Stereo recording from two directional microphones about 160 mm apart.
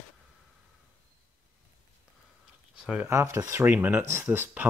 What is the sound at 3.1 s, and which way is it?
Speech, 15° right (ahead or behind).